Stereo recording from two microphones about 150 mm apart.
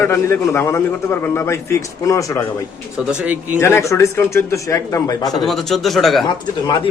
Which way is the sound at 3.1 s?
10° right (ahead or behind).